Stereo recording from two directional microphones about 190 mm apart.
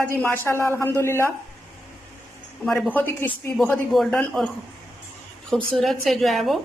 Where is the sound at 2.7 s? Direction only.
Centre (ahead or behind).